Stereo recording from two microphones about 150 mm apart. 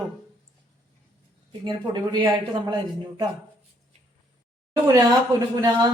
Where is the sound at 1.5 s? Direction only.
30° right (ahead or behind).